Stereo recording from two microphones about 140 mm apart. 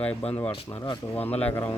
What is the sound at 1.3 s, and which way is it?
Speech, 15° left (ahead or behind).